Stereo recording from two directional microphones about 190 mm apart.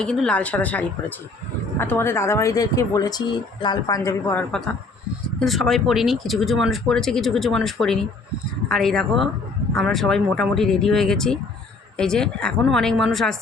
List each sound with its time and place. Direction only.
0.0 s speech: 5° left (ahead or behind)
5.4 s speech: centre (ahead or behind)